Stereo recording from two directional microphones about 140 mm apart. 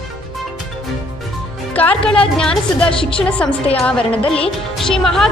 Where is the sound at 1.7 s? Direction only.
10° left (ahead or behind).